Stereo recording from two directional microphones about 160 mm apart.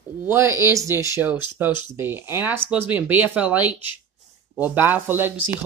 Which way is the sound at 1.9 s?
15° right (ahead or behind).